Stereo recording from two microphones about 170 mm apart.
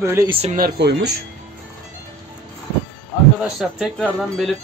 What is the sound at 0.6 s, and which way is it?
Speech, 75° right (ahead or behind).